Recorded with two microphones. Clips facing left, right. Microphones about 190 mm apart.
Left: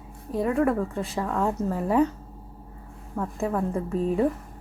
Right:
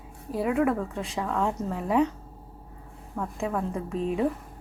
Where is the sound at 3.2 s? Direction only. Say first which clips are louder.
Left 3 dB; 5° left (ahead or behind).